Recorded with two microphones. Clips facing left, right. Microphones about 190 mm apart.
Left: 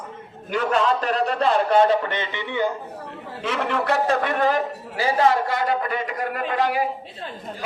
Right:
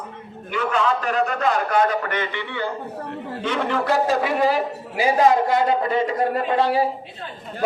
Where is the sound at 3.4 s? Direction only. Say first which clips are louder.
Right 1 dB; centre (ahead or behind); by 6.9 s 30° right (ahead or behind).